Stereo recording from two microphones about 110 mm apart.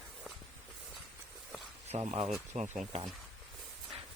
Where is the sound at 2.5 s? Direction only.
90° right.